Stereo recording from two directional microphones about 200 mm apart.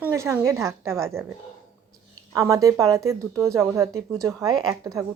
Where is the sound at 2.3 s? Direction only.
15° right (ahead or behind).